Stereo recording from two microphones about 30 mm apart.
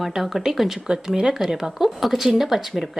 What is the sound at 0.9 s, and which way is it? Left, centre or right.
A woman's voice, right.